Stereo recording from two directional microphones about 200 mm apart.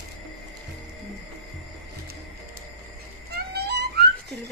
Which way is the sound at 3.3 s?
55° right (ahead or behind).